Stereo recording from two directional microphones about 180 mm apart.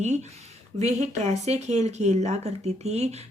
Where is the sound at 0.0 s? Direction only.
40° right (ahead or behind).